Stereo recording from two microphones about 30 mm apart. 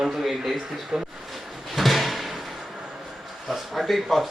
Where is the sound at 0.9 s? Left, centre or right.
Right.